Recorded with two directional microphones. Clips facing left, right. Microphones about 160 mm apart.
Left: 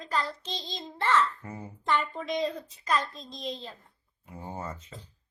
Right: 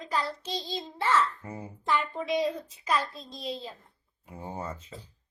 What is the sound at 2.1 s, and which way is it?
A woman's voice, 10° right (ahead or behind).